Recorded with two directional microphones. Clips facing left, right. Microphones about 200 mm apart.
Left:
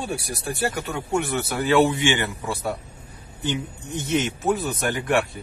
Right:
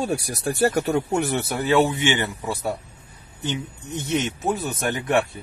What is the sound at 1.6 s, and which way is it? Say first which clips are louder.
Speech: left 1 dB; 20° right (ahead or behind).